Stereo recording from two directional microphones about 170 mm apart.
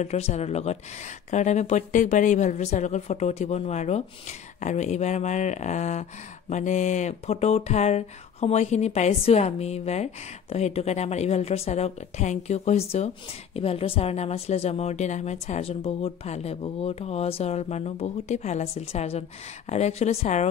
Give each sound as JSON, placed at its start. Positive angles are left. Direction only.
{"t": 0.0, "sound": "a woman's voice", "side_deg": 40}